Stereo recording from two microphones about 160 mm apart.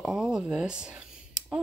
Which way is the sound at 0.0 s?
5° right (ahead or behind).